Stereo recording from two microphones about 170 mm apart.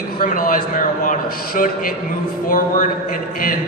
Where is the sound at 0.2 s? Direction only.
55° left (ahead or behind).